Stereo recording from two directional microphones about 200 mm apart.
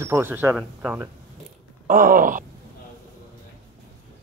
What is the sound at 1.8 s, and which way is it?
Groan, 40° right (ahead or behind).